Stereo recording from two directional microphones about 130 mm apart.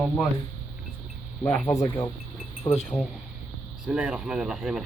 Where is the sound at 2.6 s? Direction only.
55° left (ahead or behind).